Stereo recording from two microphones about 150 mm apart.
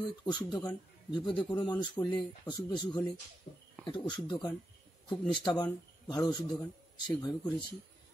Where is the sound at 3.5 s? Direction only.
70° left (ahead or behind).